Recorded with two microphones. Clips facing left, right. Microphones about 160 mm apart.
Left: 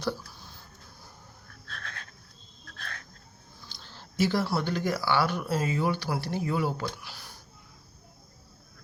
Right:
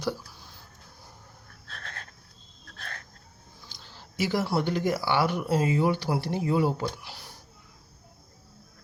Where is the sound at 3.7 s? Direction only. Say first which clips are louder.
Left 1 dB; 10° right (ahead or behind).